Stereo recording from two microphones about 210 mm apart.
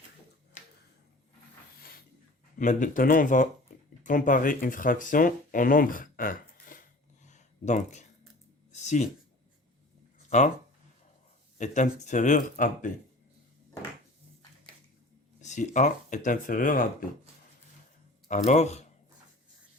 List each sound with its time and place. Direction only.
0.6 s a sound: 35° left (ahead or behind)
2.6 s speech: 40° left (ahead or behind)
7.3 s a sound: 35° left (ahead or behind)
10.2 s speech: 35° left (ahead or behind)
11.5 s speech: 35° left (ahead or behind)
15.4 s speech: 35° left (ahead or behind)
18.3 s speech: 35° left (ahead or behind)